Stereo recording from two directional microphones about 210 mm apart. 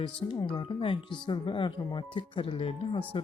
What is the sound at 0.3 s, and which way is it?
Speech, 25° left (ahead or behind).